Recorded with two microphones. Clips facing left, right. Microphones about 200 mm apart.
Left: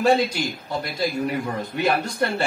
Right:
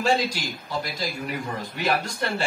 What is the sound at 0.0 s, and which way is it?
Speech, 60° left (ahead or behind).